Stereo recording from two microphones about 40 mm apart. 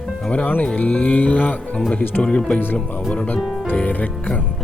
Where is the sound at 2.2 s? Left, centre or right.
Left.